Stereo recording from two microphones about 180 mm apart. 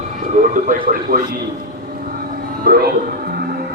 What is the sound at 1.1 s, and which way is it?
Speech, 55° right (ahead or behind).